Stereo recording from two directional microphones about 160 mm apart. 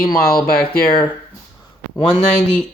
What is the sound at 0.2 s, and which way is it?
Speech, 70° left (ahead or behind).